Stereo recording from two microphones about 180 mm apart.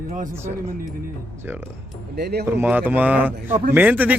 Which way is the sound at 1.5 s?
10° right (ahead or behind).